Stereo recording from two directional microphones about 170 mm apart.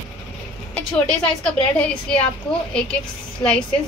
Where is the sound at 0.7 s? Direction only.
5° left (ahead or behind).